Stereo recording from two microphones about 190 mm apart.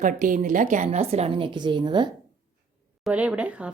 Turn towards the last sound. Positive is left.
turn(degrees=-5)  # may be behind; listen again after turning